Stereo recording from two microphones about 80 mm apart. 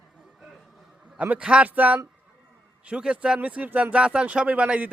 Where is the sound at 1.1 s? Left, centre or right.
Centre.